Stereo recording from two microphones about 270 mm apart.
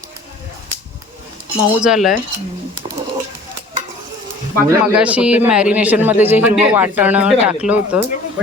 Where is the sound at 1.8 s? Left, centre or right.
Centre.